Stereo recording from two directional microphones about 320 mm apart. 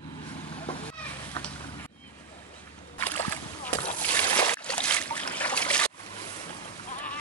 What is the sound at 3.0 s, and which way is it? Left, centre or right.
Splash, centre.